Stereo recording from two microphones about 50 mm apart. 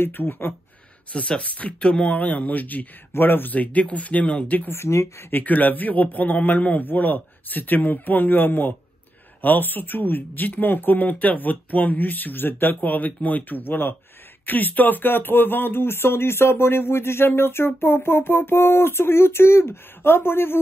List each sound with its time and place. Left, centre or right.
0.0 s speech: left
1.1 s speech: left
3.1 s speech: left
3.5 s speech: left
4.6 s speech: left
5.3 s speech: left